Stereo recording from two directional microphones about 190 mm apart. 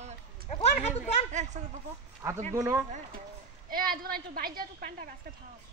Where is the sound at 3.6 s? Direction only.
50° right (ahead or behind).